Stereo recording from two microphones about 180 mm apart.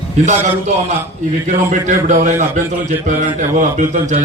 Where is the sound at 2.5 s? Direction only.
45° right (ahead or behind).